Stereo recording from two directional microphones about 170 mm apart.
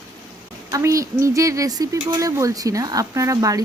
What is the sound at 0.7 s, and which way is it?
A woman's voice, 20° right (ahead or behind).